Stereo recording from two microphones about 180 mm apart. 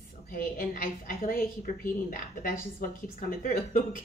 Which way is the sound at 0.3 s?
50° left (ahead or behind).